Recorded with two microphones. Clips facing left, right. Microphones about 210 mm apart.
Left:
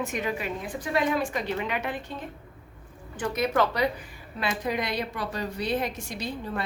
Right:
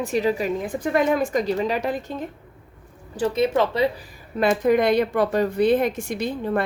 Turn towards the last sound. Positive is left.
turn(degrees=-55)  # may be behind; listen again after turning